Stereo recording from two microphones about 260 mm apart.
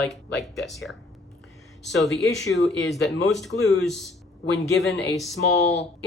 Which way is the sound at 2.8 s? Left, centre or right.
Left.